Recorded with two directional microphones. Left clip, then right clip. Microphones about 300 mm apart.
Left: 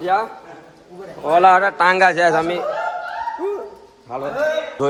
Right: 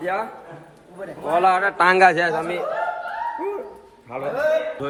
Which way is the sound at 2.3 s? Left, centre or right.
Left.